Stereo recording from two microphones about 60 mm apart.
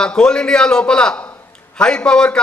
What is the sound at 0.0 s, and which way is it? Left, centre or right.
A man's voice, centre.